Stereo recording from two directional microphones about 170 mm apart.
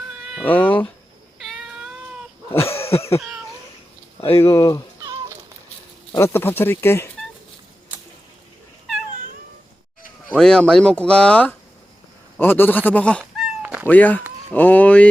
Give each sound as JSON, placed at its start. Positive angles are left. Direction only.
{"t": 0.4, "sound": "speech", "side_deg": 10}
{"t": 1.4, "sound": "cat", "side_deg": 0}
{"t": 2.5, "sound": "cough", "side_deg": 15}
{"t": 2.7, "sound": "cough", "side_deg": 35}
{"t": 4.4, "sound": "speech", "side_deg": 20}
{"t": 6.1, "sound": "speech", "side_deg": 15}
{"t": 10.2, "sound": "speech", "side_deg": 5}
{"t": 13.4, "sound": "cat", "side_deg": -5}
{"t": 13.8, "sound": "speech", "side_deg": 10}